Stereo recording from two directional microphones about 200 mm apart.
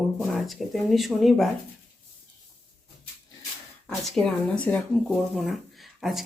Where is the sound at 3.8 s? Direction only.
Centre (ahead or behind).